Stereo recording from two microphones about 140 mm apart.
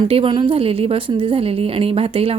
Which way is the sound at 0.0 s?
40° right (ahead or behind).